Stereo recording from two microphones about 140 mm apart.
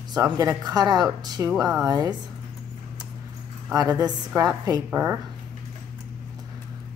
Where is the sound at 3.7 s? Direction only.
25° right (ahead or behind).